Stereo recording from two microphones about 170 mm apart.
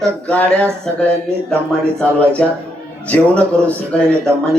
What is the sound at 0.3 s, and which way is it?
Speech, 5° left (ahead or behind).